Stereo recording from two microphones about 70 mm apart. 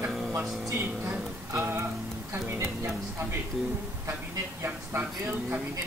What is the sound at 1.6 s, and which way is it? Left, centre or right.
Speech, right.